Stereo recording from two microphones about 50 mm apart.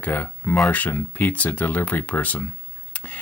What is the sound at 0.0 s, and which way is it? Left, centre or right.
Speech, left.